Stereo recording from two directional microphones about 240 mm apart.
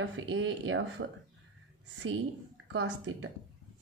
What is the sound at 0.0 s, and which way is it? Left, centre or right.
Speech, right.